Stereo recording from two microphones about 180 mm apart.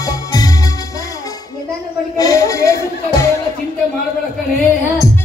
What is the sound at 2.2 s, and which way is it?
Music, 20° left (ahead or behind).